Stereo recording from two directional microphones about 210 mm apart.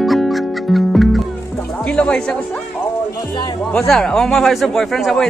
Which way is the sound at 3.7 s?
5° left (ahead or behind).